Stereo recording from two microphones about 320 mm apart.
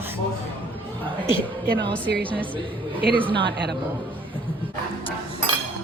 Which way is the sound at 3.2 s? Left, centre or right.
Centre.